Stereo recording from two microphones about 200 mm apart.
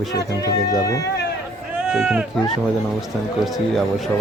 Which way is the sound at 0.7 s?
15° left (ahead or behind).